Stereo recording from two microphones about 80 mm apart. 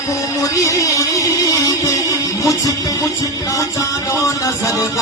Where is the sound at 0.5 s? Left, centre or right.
Left.